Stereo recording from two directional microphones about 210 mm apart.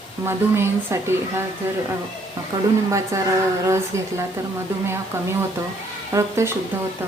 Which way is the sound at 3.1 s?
15° right (ahead or behind).